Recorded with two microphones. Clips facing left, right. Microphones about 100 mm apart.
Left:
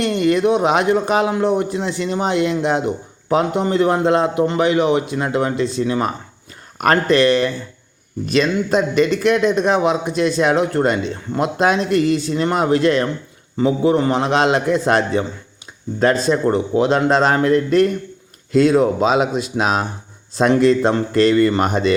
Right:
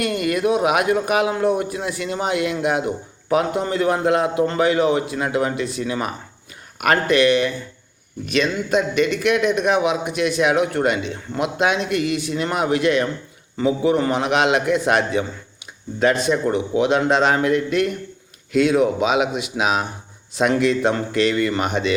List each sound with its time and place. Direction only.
0.0 s a man's voice: 25° left (ahead or behind)